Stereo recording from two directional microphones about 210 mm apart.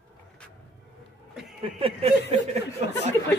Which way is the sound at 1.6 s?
25° right (ahead or behind).